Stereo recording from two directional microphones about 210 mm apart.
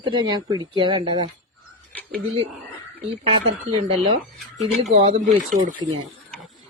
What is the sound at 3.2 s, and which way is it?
Speech, 30° right (ahead or behind).